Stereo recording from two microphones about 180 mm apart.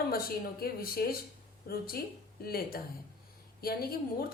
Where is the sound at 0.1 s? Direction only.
55° left (ahead or behind).